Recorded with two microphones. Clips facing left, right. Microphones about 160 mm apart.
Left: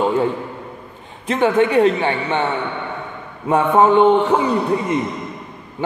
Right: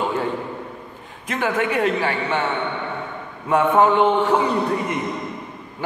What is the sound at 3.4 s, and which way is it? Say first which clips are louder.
Speech: left 2 dB; 25° left (ahead or behind).